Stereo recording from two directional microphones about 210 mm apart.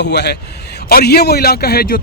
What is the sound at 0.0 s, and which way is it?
A man's voice, 55° left (ahead or behind).